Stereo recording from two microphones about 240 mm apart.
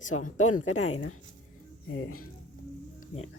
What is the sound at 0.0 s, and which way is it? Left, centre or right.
Speech, left.